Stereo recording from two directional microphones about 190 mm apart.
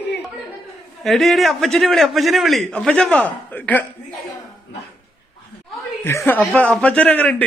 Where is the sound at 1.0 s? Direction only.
Centre (ahead or behind).